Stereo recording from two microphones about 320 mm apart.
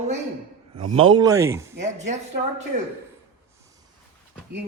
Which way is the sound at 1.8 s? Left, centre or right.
Right.